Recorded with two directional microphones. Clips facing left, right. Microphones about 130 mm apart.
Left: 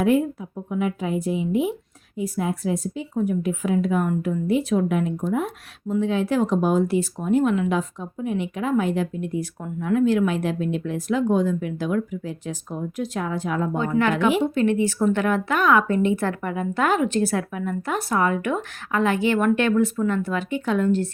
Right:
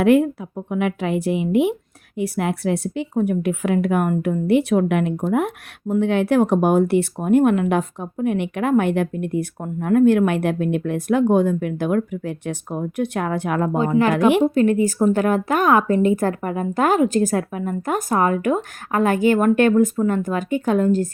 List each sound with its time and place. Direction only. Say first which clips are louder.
0.0 s a woman's voice: right 5 dB; 75° right (ahead or behind)
14.0 s a woman's voice: right 4 dB; 40° right (ahead or behind)